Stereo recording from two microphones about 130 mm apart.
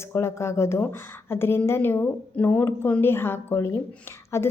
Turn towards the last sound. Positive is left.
turn(degrees=20)  # may be behind; listen again after turning